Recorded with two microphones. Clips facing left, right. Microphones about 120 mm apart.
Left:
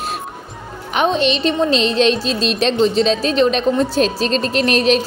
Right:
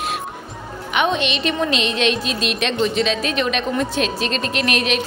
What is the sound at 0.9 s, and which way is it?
A woman's voice, 35° left (ahead or behind).